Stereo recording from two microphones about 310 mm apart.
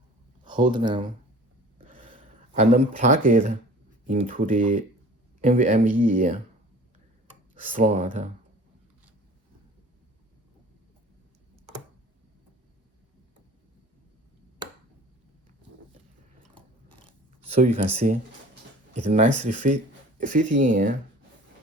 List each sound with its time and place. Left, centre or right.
0.4 s speech: centre
1.9 s a sound: centre
2.6 s speech: right
17.5 s speech: right